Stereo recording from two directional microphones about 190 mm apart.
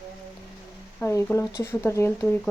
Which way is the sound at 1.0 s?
15° left (ahead or behind).